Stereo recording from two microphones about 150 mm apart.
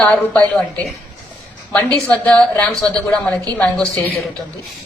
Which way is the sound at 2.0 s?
10° left (ahead or behind).